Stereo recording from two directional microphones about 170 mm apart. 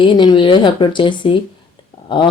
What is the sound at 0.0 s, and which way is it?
A woman's voice, 30° left (ahead or behind).